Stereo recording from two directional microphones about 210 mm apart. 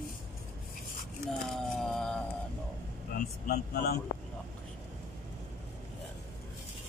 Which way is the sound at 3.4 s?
50° left (ahead or behind).